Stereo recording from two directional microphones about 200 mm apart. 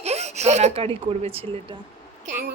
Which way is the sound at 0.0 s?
30° right (ahead or behind).